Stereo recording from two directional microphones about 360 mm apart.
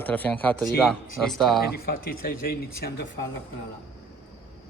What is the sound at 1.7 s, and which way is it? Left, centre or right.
Speech, left.